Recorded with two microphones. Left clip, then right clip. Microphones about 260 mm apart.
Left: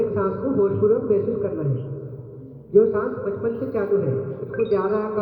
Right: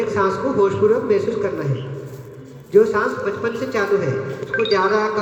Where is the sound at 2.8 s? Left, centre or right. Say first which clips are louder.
Right 3 dB; right.